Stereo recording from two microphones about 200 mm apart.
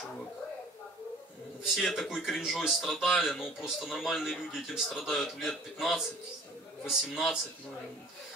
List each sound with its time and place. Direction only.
1.6 s speech: centre (ahead or behind)